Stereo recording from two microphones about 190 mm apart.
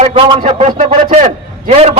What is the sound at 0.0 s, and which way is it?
A man's voice, 30° right (ahead or behind).